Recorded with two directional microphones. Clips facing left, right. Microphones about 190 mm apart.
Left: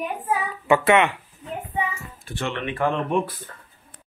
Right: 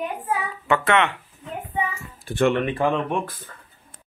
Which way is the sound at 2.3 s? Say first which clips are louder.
Right 9 dB; 50° right (ahead or behind).